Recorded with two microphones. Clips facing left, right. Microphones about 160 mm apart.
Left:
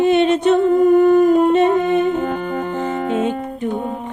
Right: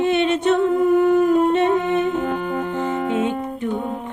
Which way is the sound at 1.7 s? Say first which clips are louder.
Left 3 dB; 40° left (ahead or behind).